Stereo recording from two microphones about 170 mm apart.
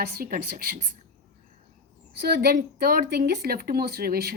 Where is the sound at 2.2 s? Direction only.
70° right (ahead or behind).